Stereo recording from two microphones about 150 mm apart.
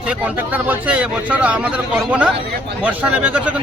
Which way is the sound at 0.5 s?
10° right (ahead or behind).